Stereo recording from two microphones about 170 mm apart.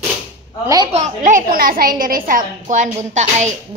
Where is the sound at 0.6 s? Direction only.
20° right (ahead or behind).